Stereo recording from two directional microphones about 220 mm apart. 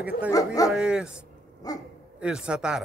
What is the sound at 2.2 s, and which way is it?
Speech, 5° right (ahead or behind).